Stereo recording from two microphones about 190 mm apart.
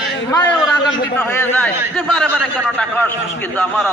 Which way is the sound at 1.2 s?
5° left (ahead or behind).